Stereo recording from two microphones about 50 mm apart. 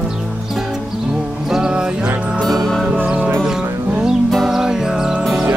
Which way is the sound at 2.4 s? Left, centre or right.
Centre.